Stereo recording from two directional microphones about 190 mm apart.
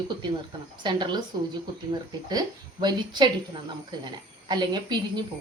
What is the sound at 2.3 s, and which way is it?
A woman's voice, 20° right (ahead or behind).